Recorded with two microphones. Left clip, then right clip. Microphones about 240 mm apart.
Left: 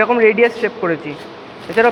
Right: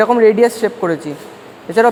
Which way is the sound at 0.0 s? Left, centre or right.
Right.